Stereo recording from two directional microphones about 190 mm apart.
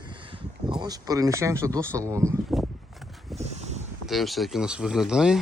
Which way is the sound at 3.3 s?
Centre (ahead or behind).